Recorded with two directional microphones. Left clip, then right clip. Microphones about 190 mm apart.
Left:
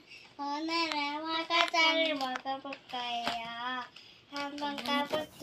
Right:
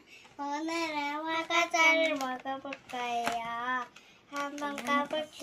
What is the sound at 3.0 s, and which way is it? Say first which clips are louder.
Hands: right 3 dB; 5° right (ahead or behind).